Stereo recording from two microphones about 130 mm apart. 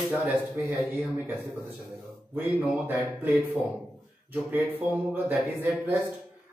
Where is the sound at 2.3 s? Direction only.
15° right (ahead or behind).